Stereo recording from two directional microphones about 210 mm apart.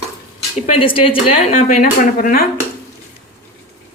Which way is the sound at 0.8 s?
25° left (ahead or behind).